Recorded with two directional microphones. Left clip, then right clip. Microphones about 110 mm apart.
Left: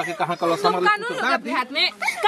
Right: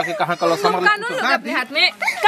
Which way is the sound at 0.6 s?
Centre (ahead or behind).